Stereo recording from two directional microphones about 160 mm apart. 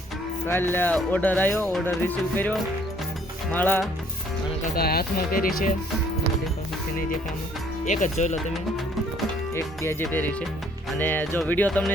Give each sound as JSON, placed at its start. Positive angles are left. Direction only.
{"t": 0.4, "sound": "speech", "side_deg": 15}
{"t": 4.7, "sound": "speech", "side_deg": 75}
{"t": 7.9, "sound": "speech", "side_deg": 50}
{"t": 9.6, "sound": "speech", "side_deg": 15}